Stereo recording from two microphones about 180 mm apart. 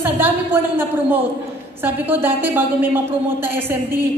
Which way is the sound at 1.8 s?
10° right (ahead or behind).